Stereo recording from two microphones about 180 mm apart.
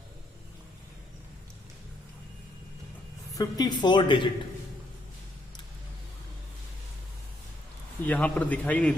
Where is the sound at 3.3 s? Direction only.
20° left (ahead or behind).